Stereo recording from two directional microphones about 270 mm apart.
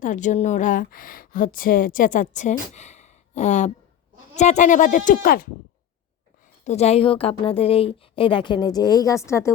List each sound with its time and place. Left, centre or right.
0.0 s speech: left
6.7 s speech: left